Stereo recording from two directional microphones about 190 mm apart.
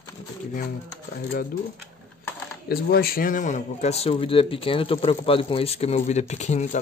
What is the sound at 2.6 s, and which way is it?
Speech, 55° left (ahead or behind).